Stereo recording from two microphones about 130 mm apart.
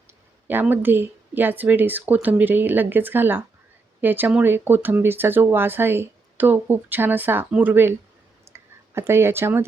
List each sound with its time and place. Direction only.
0.4 s speech: 15° right (ahead or behind)